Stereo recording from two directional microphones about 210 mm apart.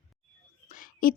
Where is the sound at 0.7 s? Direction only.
40° left (ahead or behind).